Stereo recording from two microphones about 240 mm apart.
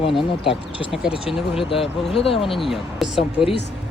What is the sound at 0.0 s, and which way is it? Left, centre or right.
Speech, left.